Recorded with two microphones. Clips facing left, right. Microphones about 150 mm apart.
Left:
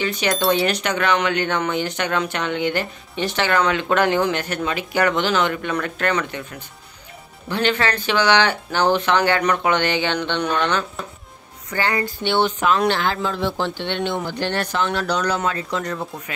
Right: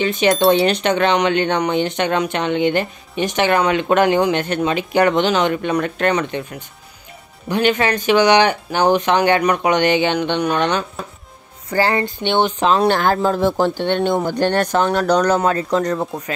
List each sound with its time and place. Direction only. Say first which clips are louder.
0.0 s speech: right 6 dB; 20° right (ahead or behind)
11.7 s speech: right 5 dB; 35° right (ahead or behind)
12.0 s speech: right 2 dB; 20° right (ahead or behind)
12.5 s speech: right 3 dB; 30° right (ahead or behind)
12.8 s speech: right 5 dB; 45° right (ahead or behind)